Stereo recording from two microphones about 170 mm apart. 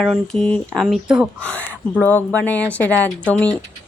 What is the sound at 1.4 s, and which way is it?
Speech, 5° left (ahead or behind).